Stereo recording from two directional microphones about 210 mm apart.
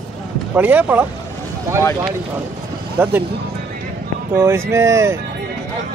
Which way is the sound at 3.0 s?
10° right (ahead or behind).